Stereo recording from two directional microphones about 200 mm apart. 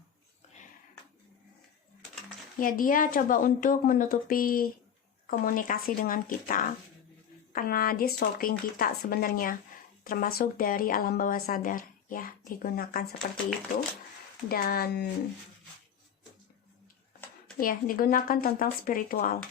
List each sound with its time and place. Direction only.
2.6 s a woman's voice: 45° left (ahead or behind)
14.5 s a woman's voice: 50° left (ahead or behind)
17.6 s a woman's voice: 45° left (ahead or behind)